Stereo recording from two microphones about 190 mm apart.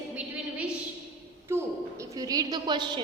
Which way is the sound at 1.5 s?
15° right (ahead or behind).